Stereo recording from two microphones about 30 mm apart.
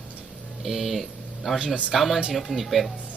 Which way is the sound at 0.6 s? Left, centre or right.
Centre.